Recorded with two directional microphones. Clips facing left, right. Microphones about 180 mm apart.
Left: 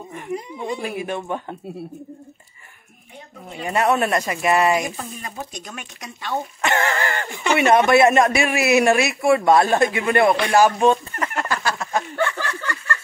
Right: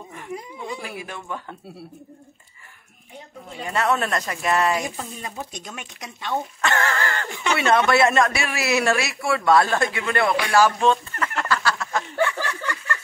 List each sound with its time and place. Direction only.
0.7 s speech: 20° left (ahead or behind)
3.6 s speech: 15° left (ahead or behind)
5.2 s speech: 20° right (ahead or behind)
6.6 s speech: 20° left (ahead or behind)
12.2 s a sound: 15° right (ahead or behind)